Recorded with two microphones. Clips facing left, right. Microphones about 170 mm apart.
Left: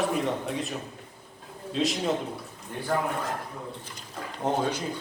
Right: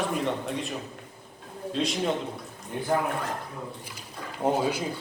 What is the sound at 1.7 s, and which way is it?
Speech, centre (ahead or behind).